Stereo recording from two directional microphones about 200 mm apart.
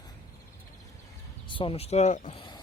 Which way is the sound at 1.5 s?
25° left (ahead or behind).